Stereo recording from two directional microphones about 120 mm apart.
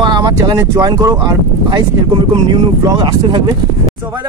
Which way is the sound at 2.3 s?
40° right (ahead or behind).